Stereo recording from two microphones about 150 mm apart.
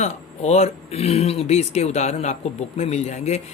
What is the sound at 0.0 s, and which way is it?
Speech, 45° left (ahead or behind).